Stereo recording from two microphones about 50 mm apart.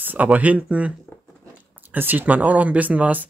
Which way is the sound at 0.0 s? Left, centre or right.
Right.